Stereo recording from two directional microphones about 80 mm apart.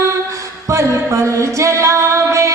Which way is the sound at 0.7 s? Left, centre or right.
Right.